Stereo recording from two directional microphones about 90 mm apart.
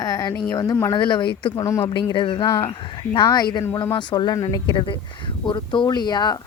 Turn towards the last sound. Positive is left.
turn(degrees=50)  # may be behind; listen again after turning